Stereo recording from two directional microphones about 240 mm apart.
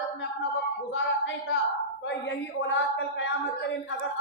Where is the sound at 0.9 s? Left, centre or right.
Left.